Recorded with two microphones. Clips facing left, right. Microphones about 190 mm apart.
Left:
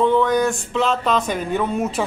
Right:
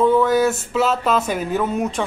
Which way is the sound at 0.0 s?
5° right (ahead or behind).